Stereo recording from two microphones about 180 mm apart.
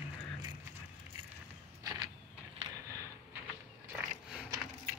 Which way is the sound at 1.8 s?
20° right (ahead or behind).